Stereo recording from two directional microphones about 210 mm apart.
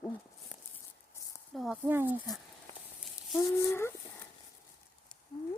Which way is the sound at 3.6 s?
10° left (ahead or behind).